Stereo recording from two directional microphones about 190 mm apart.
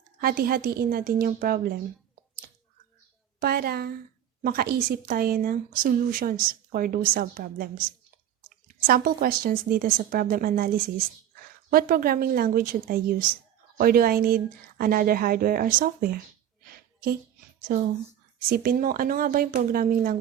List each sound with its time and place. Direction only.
0.2 s a woman's voice: 50° right (ahead or behind)
3.4 s a woman's voice: 55° right (ahead or behind)
18.3 s a woman's voice: 50° right (ahead or behind)